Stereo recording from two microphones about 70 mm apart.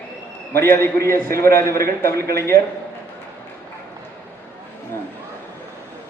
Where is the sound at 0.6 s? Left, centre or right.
Left.